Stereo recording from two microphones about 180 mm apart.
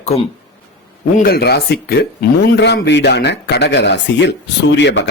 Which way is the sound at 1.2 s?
60° left (ahead or behind).